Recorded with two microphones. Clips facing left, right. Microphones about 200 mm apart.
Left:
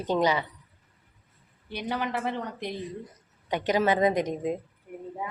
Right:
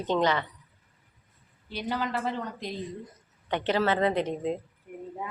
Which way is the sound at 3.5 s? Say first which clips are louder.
Left 1 dB; 10° left (ahead or behind).